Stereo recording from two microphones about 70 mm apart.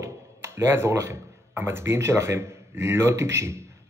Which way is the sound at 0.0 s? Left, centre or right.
Right.